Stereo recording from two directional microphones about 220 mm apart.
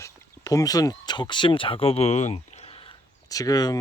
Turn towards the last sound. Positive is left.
turn(degrees=15)  # may be behind; listen again after turning